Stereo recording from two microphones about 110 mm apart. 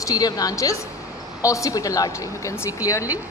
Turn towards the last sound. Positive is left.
turn(degrees=30)  # may be behind; listen again after turning